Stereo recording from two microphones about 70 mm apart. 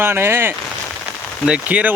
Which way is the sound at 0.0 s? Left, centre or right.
Right.